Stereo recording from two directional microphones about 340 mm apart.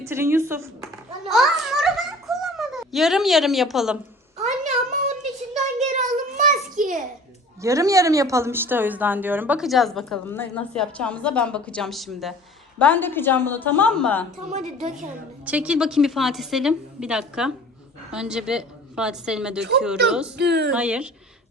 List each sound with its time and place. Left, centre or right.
0.0 s speech: centre
1.3 s babbling: centre
4.4 s a sound: right
7.6 s speech: centre
14.5 s speech: right
15.4 s speech: centre
20.3 s speech: right
20.7 s speech: centre